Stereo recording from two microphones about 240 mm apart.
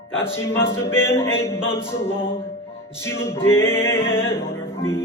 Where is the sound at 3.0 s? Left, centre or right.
Centre.